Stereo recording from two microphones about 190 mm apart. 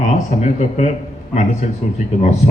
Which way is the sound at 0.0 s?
40° left (ahead or behind).